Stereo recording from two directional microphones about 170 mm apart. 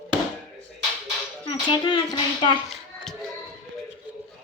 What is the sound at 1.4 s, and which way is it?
Speech, 30° left (ahead or behind).